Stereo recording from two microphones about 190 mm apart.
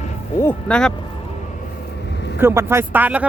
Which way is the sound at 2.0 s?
65° left (ahead or behind).